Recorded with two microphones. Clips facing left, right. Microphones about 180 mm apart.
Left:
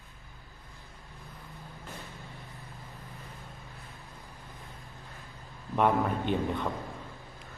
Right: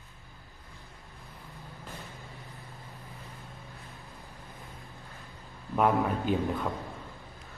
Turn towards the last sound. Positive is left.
turn(degrees=0)  # may be behind; listen again after turning